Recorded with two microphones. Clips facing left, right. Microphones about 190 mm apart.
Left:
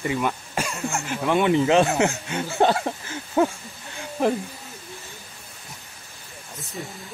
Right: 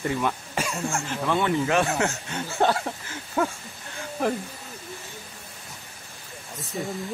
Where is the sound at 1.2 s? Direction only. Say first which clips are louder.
Left 5 dB; 20° left (ahead or behind).